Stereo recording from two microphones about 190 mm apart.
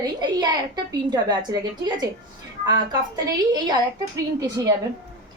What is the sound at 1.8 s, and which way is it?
Speech, 20° right (ahead or behind).